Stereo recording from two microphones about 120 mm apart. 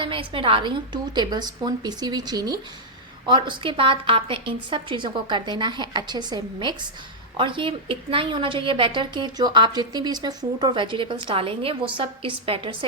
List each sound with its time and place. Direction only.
0.0 s a woman's voice: 45° right (ahead or behind)